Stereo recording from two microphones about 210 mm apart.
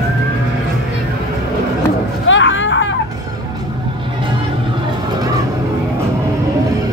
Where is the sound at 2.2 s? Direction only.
65° left (ahead or behind).